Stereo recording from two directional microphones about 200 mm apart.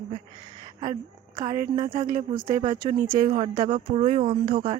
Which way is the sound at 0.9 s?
20° right (ahead or behind).